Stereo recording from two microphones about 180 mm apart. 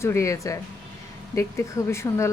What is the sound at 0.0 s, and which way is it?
A woman's voice, 15° left (ahead or behind).